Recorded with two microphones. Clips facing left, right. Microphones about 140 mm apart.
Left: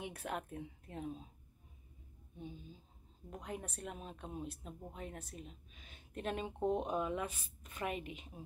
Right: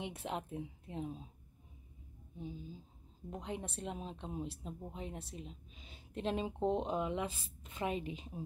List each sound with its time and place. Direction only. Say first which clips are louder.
0.0 s speech: right 1 dB; 20° right (ahead or behind)
3.3 s speech: right 3 dB; 25° right (ahead or behind)